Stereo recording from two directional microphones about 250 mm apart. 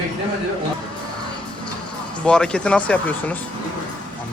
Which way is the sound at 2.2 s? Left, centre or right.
Centre.